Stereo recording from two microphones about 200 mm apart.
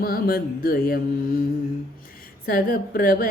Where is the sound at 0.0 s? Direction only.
50° left (ahead or behind).